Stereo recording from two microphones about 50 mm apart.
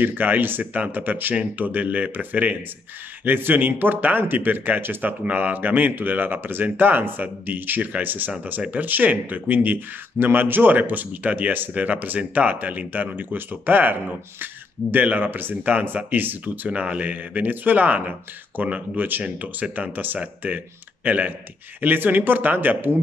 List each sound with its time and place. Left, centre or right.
0.0 s speech: right
19.2 s speech: right